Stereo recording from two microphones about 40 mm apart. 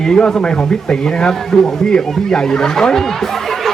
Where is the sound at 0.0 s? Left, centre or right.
Centre.